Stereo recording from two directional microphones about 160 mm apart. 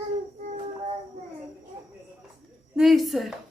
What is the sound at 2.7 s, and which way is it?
Speech, centre (ahead or behind).